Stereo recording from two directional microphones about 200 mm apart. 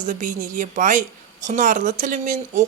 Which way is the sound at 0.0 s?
40° right (ahead or behind).